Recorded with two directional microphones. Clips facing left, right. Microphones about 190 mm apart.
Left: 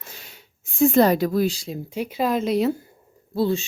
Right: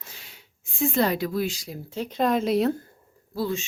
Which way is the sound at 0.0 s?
45° left (ahead or behind).